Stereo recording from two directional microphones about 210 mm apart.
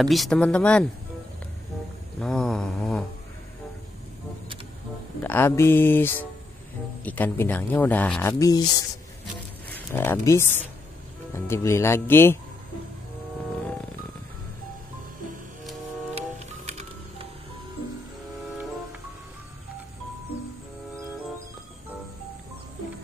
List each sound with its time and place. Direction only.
0.0 s mantra: centre (ahead or behind)
2.1 s mantra: 5° left (ahead or behind)
5.2 s speech: 10° left (ahead or behind)
16.2 s music: 30° right (ahead or behind)